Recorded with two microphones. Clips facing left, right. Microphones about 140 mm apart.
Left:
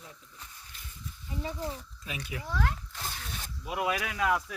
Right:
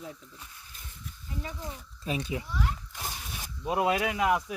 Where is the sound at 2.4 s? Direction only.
90° left.